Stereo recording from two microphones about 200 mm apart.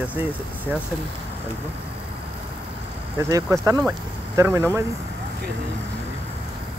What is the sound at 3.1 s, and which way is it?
Speech, 15° right (ahead or behind).